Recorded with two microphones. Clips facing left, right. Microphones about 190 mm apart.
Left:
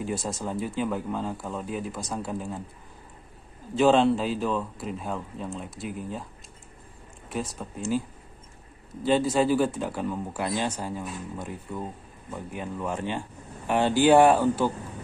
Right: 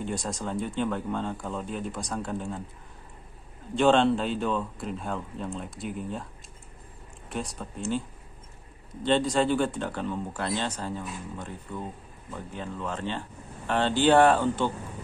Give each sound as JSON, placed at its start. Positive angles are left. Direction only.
{"t": 0.0, "sound": "speech", "side_deg": 5}
{"t": 3.7, "sound": "speech", "side_deg": 0}
{"t": 7.2, "sound": "speech", "side_deg": 0}
{"t": 9.0, "sound": "speech", "side_deg": 5}